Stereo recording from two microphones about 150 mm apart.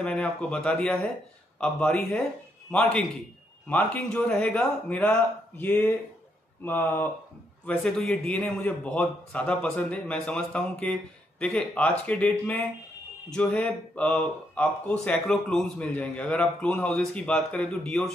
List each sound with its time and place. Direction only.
0.0 s speech: 5° left (ahead or behind)